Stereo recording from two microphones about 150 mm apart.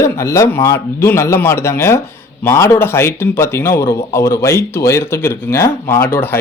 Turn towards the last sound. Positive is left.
turn(degrees=15)  # may be behind; listen again after turning